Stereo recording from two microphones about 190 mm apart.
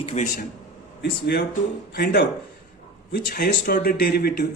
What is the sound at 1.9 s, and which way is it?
A man's voice, 55° left (ahead or behind).